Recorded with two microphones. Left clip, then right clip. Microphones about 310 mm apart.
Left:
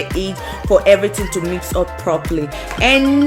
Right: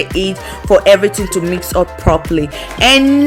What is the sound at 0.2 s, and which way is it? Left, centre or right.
Speech, centre.